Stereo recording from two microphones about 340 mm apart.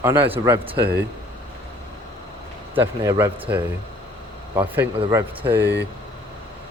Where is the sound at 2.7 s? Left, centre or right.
Centre.